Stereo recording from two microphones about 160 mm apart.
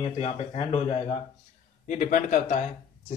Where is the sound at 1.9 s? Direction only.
50° left (ahead or behind).